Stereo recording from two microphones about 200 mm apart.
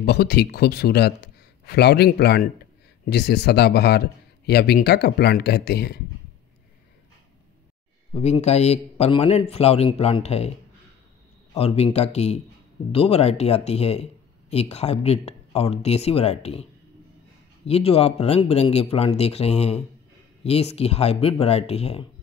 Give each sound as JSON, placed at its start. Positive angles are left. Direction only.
{"t": 0.0, "sound": "a man's voice", "side_deg": 55}
{"t": 8.1, "sound": "a man's voice", "side_deg": 35}
{"t": 11.5, "sound": "a man's voice", "side_deg": 30}
{"t": 17.6, "sound": "a man's voice", "side_deg": 30}